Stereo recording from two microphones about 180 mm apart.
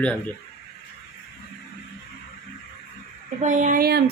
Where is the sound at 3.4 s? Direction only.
45° right (ahead or behind).